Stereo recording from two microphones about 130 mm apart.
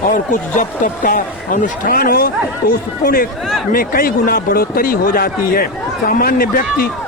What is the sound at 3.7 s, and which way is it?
Speech, 90° left.